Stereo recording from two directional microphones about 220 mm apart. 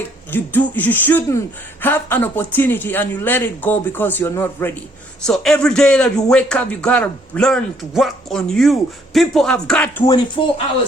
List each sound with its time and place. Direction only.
0.3 s a man's voice: 10° left (ahead or behind)
10.1 s speech: 20° left (ahead or behind)